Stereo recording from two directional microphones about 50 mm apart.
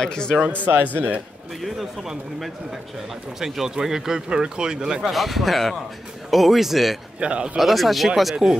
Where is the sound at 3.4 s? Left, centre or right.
Centre.